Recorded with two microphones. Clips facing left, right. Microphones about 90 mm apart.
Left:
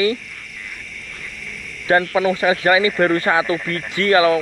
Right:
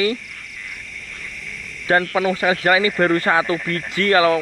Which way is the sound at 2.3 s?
20° left (ahead or behind).